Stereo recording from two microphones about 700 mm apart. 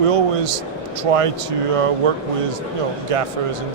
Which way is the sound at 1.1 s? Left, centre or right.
Right.